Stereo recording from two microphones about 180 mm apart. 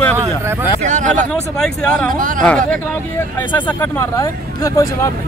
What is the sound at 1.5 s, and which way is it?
Speech, 5° left (ahead or behind).